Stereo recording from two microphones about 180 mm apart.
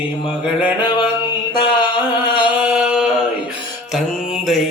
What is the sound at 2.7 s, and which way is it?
Mantra, 5° right (ahead or behind).